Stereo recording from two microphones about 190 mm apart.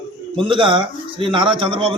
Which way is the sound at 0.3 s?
25° right (ahead or behind).